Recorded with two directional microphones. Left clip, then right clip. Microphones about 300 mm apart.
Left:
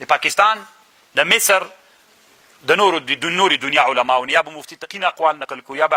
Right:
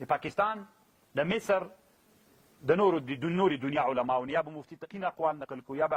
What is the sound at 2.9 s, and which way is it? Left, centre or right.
Speech, centre.